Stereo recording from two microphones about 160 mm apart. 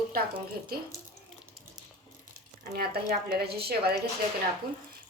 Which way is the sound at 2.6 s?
75° right (ahead or behind).